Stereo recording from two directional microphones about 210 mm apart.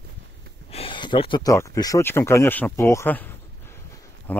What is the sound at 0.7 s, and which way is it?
Speech, 25° left (ahead or behind).